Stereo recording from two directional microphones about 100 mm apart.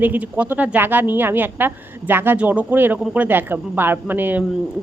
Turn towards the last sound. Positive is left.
turn(degrees=-20)  # may be behind; listen again after turning